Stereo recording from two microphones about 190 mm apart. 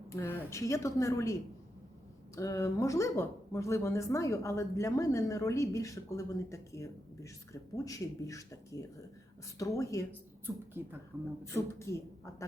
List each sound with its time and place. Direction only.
0.1 s speech: 15° left (ahead or behind)
10.8 s speech: 10° right (ahead or behind)
11.4 s speech: 15° left (ahead or behind)